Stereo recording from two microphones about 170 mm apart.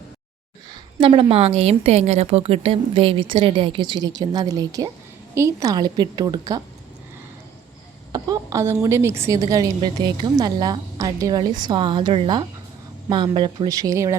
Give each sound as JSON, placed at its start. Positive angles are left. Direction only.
{"t": 0.7, "sound": "a woman's voice", "side_deg": -30}
{"t": 8.1, "sound": "a woman's voice", "side_deg": -20}